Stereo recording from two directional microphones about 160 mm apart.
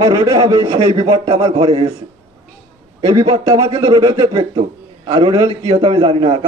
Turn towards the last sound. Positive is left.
turn(degrees=-35)  # may be behind; listen again after turning